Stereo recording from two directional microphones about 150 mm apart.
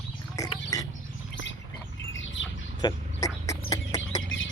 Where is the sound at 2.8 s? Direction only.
25° left (ahead or behind).